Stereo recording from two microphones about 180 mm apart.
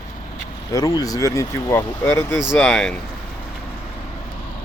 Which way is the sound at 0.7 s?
20° left (ahead or behind).